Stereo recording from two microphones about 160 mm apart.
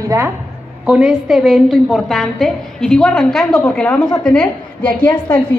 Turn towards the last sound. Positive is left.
turn(degrees=15)  # may be behind; listen again after turning